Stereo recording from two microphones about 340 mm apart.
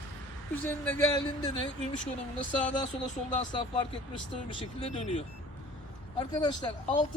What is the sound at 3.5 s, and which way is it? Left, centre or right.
Speech, centre.